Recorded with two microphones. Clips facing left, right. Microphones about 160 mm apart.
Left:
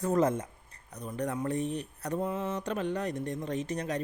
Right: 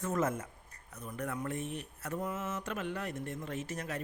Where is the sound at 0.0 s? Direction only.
35° left (ahead or behind).